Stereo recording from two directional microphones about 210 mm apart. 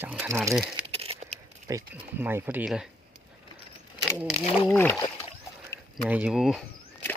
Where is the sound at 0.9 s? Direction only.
30° right (ahead or behind).